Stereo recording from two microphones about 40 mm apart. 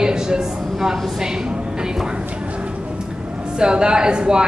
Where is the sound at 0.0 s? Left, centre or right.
Centre.